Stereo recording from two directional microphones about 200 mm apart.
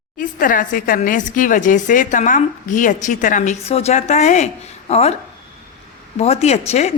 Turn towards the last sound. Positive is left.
turn(degrees=35)  # may be behind; listen again after turning